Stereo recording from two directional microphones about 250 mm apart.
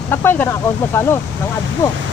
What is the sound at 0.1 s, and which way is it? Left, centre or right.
Speech, centre.